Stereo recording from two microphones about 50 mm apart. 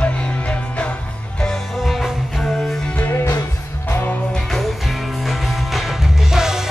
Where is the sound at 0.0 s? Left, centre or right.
Left.